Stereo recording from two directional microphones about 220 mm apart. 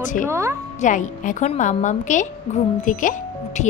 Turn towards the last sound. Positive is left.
turn(degrees=35)  # may be behind; listen again after turning